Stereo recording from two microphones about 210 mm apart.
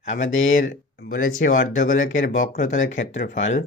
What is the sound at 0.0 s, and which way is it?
Speech, 35° left (ahead or behind).